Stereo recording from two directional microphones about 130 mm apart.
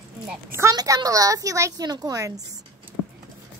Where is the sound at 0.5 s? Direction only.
25° right (ahead or behind).